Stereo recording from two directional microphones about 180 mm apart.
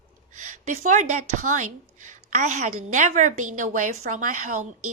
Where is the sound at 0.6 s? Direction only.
40° right (ahead or behind).